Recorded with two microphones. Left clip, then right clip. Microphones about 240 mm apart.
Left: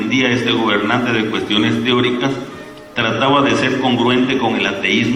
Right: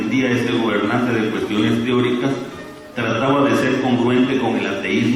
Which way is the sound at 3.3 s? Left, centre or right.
Centre.